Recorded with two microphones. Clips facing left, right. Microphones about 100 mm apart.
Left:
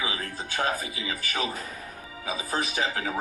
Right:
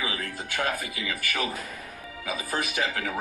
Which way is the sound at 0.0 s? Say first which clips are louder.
Even; 30° left (ahead or behind).